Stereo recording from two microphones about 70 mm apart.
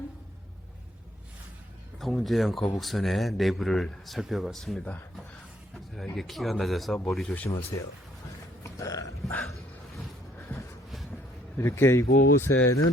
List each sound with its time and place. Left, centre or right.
2.0 s a man's voice: centre
7.7 s speech: left
8.6 s a sound: left
11.5 s speech: left